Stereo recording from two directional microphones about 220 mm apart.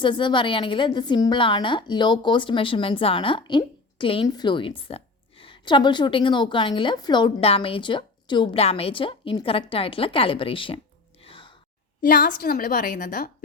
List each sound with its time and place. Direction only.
0.0 s a woman's voice: 20° left (ahead or behind)
11.2 s sigh: 25° left (ahead or behind)
12.0 s a woman's voice: 40° left (ahead or behind)